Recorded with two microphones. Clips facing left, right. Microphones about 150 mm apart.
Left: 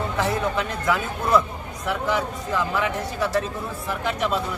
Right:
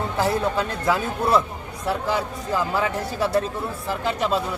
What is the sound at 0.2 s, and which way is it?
Speech, 30° right (ahead or behind).